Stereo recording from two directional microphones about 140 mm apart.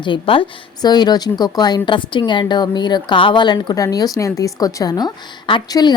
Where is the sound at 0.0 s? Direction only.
35° left (ahead or behind).